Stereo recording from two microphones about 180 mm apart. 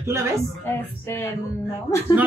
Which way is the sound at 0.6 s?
15° left (ahead or behind).